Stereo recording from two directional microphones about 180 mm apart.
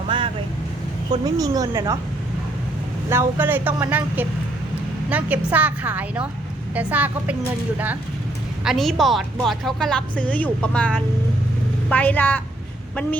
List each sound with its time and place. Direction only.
0.1 s vehicle: 25° right (ahead or behind)
1.2 s a woman's voice: 20° right (ahead or behind)
3.1 s speech: 10° right (ahead or behind)
8.6 s a woman's voice: centre (ahead or behind)